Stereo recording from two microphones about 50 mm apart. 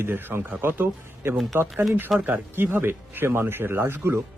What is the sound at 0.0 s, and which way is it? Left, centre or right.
Speech, right.